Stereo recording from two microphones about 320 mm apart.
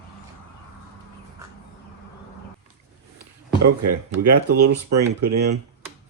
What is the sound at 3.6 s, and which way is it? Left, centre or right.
Speech, right.